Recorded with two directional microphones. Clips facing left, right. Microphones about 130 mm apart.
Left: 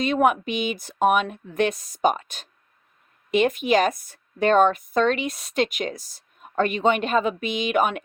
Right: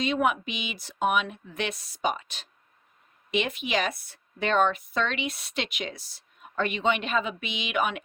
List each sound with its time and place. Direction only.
0.0 s speech: 50° left (ahead or behind)